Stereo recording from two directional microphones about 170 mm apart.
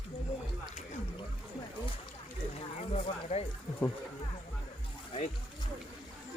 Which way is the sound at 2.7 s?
40° left (ahead or behind).